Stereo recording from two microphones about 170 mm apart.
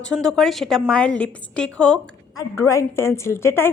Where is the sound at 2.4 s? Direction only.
15° left (ahead or behind).